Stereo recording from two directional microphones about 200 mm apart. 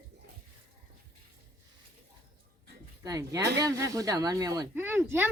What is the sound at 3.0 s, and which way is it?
Speech, 15° right (ahead or behind).